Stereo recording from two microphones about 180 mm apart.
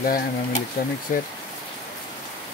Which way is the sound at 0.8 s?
65° left (ahead or behind).